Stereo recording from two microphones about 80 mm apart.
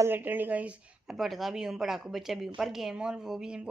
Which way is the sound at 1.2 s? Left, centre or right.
Centre.